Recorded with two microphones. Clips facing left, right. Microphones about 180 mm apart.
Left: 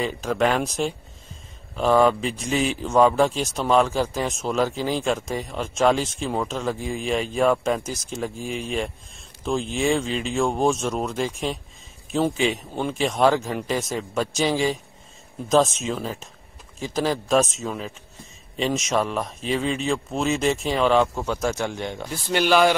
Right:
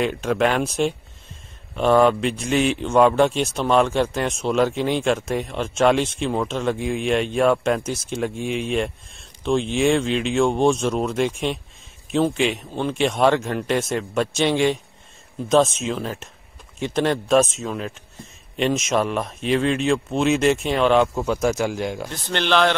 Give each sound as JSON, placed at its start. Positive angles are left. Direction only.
{"t": 0.2, "sound": "a man's voice", "side_deg": 0}
{"t": 22.1, "sound": "speech", "side_deg": 10}